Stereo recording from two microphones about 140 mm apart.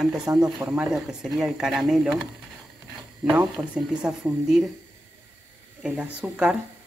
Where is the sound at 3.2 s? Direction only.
10° right (ahead or behind).